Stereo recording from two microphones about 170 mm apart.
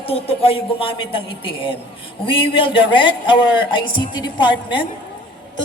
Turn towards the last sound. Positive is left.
turn(degrees=30)  # may be behind; listen again after turning